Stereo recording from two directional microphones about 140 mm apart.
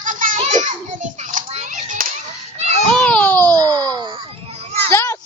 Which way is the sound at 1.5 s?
60° right (ahead or behind).